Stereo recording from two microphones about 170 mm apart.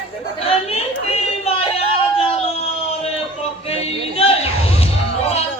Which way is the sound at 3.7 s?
35° left (ahead or behind).